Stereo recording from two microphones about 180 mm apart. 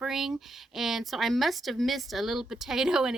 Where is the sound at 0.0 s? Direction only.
Centre (ahead or behind).